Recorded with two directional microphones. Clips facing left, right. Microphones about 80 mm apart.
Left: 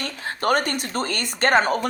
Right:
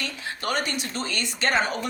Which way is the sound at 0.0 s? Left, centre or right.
Left.